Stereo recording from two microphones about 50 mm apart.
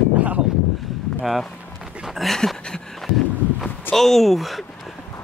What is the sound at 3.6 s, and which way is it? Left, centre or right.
Speech, centre.